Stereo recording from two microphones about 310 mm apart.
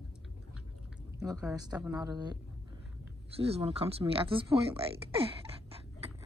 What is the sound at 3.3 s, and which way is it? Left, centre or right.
Speech, centre.